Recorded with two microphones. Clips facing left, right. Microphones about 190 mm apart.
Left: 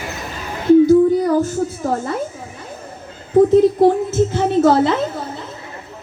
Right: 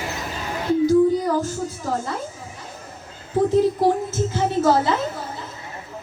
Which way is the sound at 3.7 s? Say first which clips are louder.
Left 6 dB; 60° left (ahead or behind).